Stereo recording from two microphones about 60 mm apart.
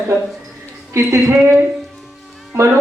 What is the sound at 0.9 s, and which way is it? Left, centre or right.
Speech, right.